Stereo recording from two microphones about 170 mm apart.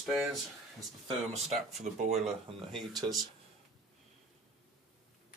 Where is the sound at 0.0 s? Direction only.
Centre (ahead or behind).